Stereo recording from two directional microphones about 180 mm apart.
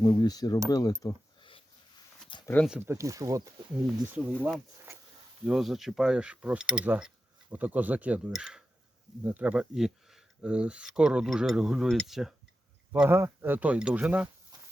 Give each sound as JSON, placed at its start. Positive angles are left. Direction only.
{"t": 0.0, "sound": "speech", "side_deg": 20}
{"t": 0.7, "sound": "a sound", "side_deg": 20}
{"t": 2.6, "sound": "speech", "side_deg": -5}
{"t": 2.9, "sound": "speech", "side_deg": -15}
{"t": 5.5, "sound": "speech", "side_deg": 0}
{"t": 12.9, "sound": "speech", "side_deg": -10}